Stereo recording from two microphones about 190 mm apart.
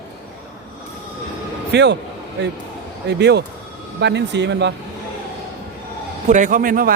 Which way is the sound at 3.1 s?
65° right (ahead or behind).